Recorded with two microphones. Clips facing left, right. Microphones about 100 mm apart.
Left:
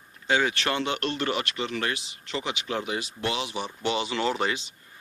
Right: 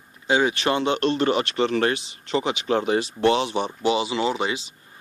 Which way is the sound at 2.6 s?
35° right (ahead or behind).